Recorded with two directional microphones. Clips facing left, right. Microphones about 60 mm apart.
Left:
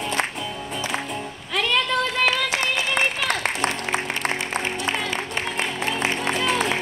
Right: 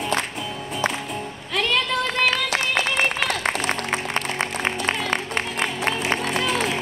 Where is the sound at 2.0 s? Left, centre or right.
Right.